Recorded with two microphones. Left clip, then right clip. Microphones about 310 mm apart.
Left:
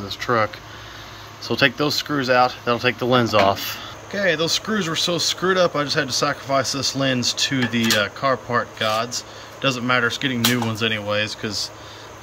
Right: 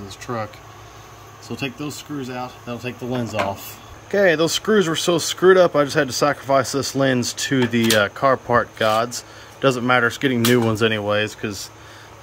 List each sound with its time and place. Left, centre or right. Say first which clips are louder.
0.2 s speech: left 8 dB; centre
4.1 s speech: right 4 dB; centre